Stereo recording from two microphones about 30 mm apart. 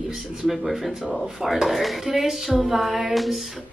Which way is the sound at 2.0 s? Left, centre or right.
Centre.